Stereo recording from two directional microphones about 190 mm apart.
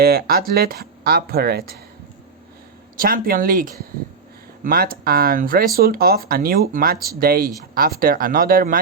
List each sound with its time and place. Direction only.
0.0 s speech: 55° right (ahead or behind)
3.0 s speech: 50° right (ahead or behind)